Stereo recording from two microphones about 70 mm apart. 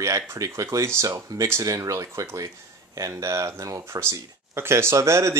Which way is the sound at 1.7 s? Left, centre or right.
Right.